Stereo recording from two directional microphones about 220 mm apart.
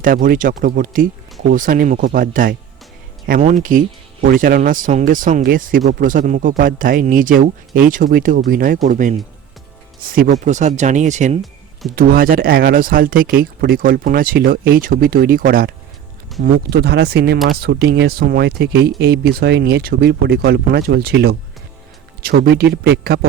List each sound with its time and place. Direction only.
0.0 s speech: 40° right (ahead or behind)